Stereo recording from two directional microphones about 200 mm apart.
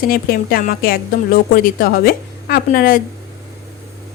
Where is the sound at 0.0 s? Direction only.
45° left (ahead or behind).